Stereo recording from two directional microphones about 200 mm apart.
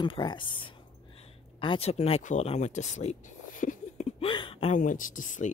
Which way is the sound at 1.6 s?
25° left (ahead or behind).